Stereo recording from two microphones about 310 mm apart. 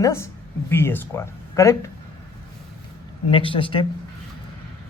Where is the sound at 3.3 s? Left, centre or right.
Centre.